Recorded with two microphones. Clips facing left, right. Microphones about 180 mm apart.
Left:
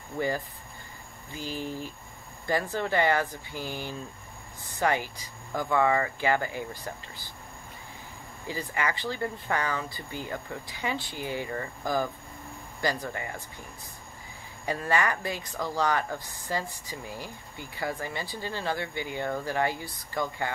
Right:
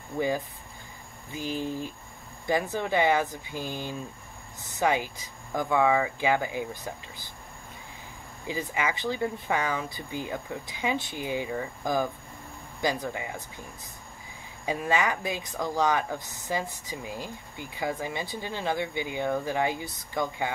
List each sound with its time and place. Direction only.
1.3 s speech: 15° right (ahead or behind)
8.5 s speech: 15° right (ahead or behind)
13.1 s speech: 10° right (ahead or behind)
14.7 s speech: 15° right (ahead or behind)